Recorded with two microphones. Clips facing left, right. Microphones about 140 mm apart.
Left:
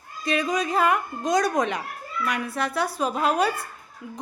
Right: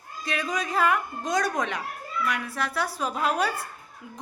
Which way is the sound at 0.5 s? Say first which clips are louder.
Even; 25° left (ahead or behind).